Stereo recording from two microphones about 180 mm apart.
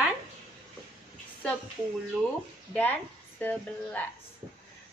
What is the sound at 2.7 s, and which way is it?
A woman's voice, 5° left (ahead or behind).